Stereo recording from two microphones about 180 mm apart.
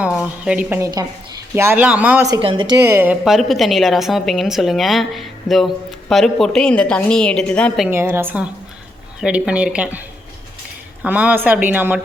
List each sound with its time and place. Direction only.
0.0 s a woman's voice: 5° right (ahead or behind)
0.8 s speech: 20° right (ahead or behind)
1.5 s speech: 10° right (ahead or behind)
2.2 s a woman's voice: 25° right (ahead or behind); by 7.9 s 5° left (ahead or behind)
7.9 s speech: 15° right (ahead or behind)
11.0 s speech: 10° right (ahead or behind)